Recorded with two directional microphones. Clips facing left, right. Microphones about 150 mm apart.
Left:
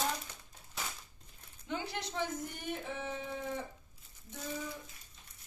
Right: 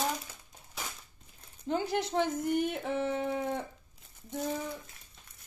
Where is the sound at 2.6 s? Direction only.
75° right (ahead or behind).